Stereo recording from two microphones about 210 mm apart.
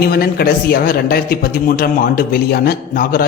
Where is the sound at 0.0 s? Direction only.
45° left (ahead or behind).